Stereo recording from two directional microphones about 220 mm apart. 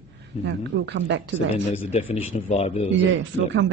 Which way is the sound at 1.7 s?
25° left (ahead or behind).